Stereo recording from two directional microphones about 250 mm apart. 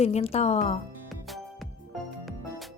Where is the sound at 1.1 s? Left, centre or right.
Centre.